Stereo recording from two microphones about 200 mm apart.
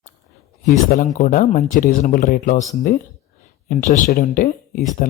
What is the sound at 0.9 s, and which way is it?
Speech, 40° left (ahead or behind).